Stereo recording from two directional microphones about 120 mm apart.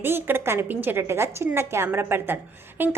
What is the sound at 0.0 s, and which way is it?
A woman's voice, 15° right (ahead or behind).